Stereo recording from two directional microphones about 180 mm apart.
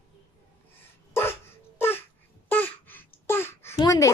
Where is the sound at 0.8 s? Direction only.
15° left (ahead or behind).